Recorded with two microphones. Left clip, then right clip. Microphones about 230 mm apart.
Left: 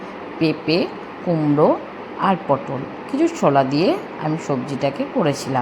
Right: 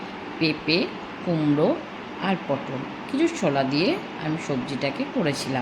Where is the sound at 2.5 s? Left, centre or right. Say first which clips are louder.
Left 7 dB; centre.